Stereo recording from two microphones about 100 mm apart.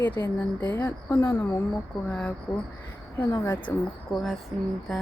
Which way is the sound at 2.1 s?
15° left (ahead or behind).